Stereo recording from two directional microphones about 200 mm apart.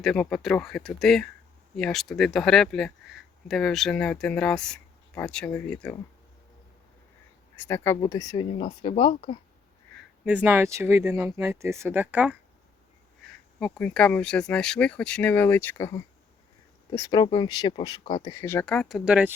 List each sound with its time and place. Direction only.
0.0 s speech: centre (ahead or behind)
7.5 s speech: 10° left (ahead or behind); by 9.4 s 25° left (ahead or behind)
10.2 s speech: 10° right (ahead or behind)
13.2 s speech: 5° left (ahead or behind)